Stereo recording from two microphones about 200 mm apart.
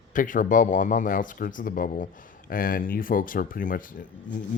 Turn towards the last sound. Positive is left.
turn(degrees=40)  # may be behind; listen again after turning